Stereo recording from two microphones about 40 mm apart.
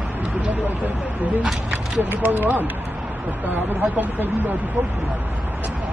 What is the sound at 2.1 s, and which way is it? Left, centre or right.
Speech, right.